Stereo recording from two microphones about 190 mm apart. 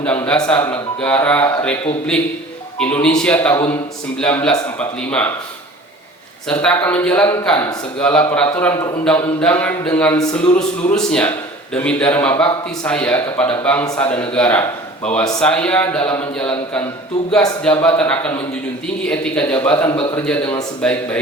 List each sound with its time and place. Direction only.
0.0 s a man's voice: 5° left (ahead or behind)
6.5 s a man's voice: 5° left (ahead or behind)
13.8 s a man's voice: 20° left (ahead or behind)
14.1 s a man's voice: 5° left (ahead or behind)
19.9 s a man's voice: 30° left (ahead or behind)
20.1 s a man's voice: 5° left (ahead or behind)